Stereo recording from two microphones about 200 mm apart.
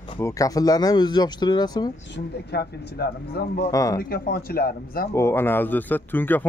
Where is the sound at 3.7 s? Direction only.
15° left (ahead or behind).